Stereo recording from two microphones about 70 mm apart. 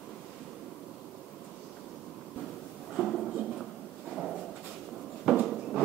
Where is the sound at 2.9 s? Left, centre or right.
Centre.